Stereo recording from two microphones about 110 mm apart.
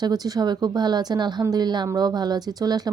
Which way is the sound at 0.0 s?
40° right (ahead or behind).